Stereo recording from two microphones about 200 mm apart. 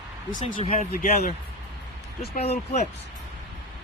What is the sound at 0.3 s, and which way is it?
Speech, 40° left (ahead or behind).